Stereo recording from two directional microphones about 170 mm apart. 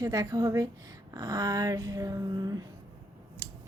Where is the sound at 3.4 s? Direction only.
20° right (ahead or behind).